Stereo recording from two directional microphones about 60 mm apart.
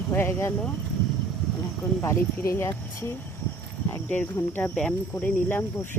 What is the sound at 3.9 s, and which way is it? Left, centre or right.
Cricket, left.